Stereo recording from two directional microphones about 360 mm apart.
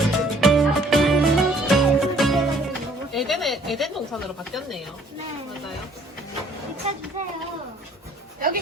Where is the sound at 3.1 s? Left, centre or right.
Centre.